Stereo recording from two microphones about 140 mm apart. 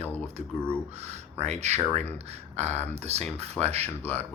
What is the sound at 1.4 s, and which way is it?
Speech, 55° right (ahead or behind).